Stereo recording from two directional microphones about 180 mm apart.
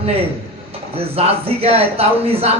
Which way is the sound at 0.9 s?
35° right (ahead or behind).